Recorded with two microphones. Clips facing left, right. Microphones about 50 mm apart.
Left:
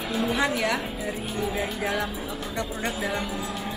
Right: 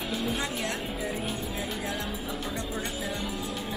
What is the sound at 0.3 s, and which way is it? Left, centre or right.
Speech, left.